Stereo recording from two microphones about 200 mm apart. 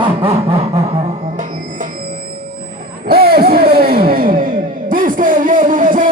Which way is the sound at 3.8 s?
50° right (ahead or behind).